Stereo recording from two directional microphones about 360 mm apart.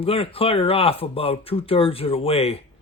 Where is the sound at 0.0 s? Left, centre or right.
Centre.